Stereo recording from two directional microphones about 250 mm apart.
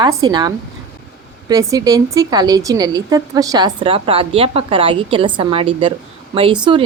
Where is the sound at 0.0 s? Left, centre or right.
Centre.